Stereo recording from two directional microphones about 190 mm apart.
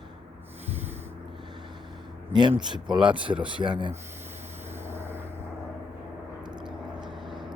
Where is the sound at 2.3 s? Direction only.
25° right (ahead or behind).